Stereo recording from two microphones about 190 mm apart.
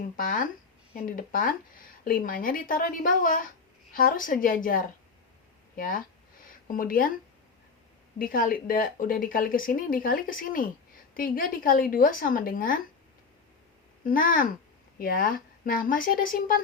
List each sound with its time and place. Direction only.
0.2 s speech: 45° left (ahead or behind)
8.2 s speech: 45° left (ahead or behind)
14.0 s speech: 45° left (ahead or behind)